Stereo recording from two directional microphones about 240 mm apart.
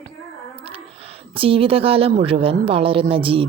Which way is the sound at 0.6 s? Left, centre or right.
Right.